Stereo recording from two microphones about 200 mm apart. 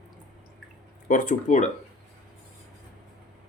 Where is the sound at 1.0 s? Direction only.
40° left (ahead or behind).